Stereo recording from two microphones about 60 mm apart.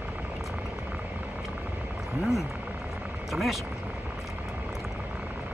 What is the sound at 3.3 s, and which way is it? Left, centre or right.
Vehicle, centre.